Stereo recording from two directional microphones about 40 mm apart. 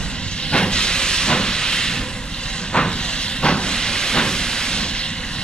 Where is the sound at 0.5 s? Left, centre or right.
Left.